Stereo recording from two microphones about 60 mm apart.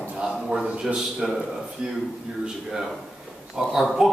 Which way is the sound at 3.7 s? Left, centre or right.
Centre.